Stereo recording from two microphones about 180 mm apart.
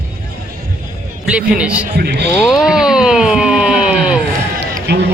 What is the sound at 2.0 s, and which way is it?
Speech, 65° right (ahead or behind).